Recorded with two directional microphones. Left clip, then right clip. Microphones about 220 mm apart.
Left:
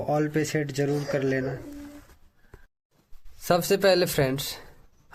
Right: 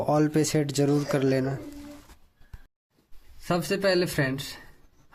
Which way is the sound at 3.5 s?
45° left (ahead or behind).